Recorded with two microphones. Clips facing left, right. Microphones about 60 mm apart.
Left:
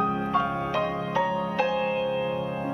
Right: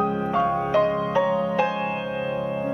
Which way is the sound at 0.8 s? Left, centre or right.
Centre.